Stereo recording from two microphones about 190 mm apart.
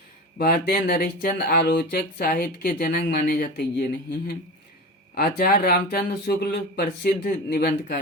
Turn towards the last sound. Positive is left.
turn(degrees=55)  # may be behind; listen again after turning